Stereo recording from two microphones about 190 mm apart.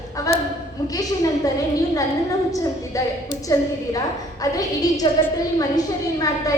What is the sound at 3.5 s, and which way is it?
A woman's voice, 15° left (ahead or behind).